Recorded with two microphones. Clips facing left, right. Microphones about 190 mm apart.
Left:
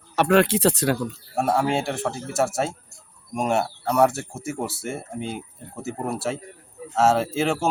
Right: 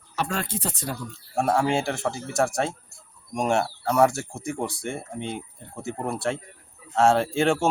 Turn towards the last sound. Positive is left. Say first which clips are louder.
# right 1 dB
turn(degrees=0)  # may be behind; listen again after turning